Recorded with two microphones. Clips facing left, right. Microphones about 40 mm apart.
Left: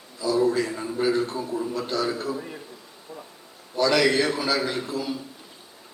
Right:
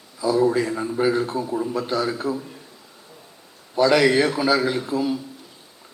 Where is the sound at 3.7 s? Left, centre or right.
Centre.